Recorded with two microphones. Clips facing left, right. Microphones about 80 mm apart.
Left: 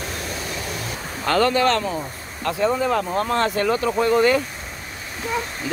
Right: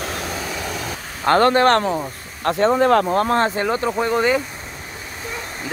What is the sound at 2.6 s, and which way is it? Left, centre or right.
Speech, right.